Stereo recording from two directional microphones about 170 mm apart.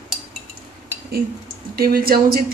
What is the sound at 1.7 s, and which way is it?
Speech, 60° right (ahead or behind).